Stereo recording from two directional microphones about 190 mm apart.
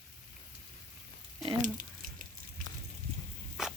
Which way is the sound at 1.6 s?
45° right (ahead or behind).